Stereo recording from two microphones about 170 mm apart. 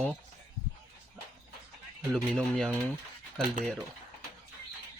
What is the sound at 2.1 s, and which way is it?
Speech, centre (ahead or behind).